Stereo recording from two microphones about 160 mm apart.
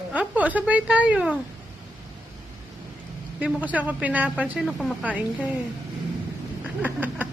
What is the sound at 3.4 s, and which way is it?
Speech, 10° right (ahead or behind).